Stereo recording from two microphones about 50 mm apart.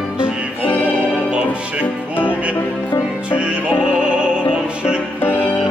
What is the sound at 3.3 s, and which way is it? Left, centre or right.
Music, right.